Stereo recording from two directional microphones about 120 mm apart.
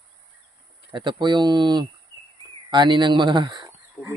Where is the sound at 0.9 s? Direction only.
40° right (ahead or behind).